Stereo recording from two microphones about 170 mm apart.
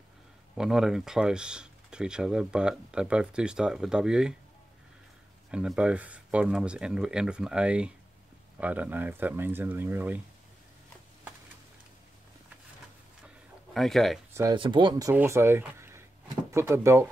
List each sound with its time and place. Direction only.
0.6 s speech: 5° right (ahead or behind)
5.5 s speech: 5° right (ahead or behind)
13.7 s speech: centre (ahead or behind)
14.3 s speech: 20° right (ahead or behind)